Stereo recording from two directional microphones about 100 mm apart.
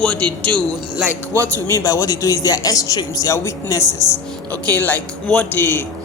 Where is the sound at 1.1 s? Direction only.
25° left (ahead or behind).